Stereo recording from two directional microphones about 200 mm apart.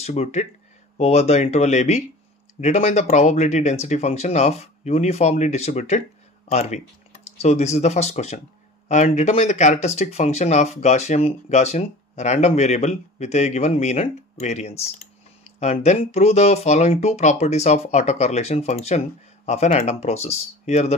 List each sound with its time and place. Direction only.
0.0 s speech: 35° left (ahead or behind)